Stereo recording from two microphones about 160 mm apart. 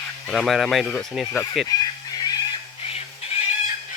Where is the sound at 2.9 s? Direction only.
40° left (ahead or behind).